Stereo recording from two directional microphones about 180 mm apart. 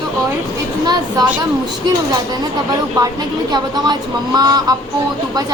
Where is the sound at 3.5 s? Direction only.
20° right (ahead or behind).